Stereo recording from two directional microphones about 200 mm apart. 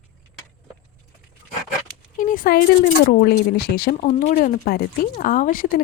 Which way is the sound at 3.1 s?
50° left (ahead or behind).